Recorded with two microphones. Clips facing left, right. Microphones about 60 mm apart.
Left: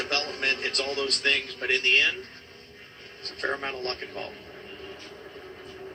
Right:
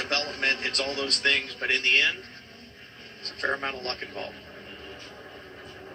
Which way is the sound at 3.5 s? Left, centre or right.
Right.